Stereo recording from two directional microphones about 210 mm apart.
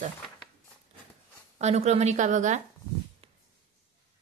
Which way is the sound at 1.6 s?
30° right (ahead or behind).